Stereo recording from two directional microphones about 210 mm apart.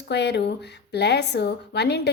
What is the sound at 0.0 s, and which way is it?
A woman's voice, 55° left (ahead or behind).